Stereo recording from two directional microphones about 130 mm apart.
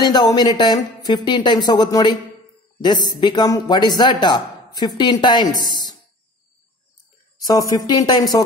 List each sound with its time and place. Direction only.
0.0 s speech: 30° left (ahead or behind)
7.4 s speech: 30° left (ahead or behind)